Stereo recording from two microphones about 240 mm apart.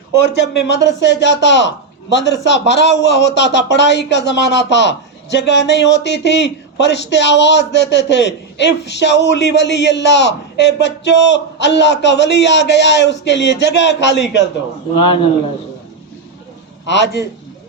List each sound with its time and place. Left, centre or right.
0.3 s a man's voice: left
14.9 s a man's voice: left
16.8 s a man's voice: left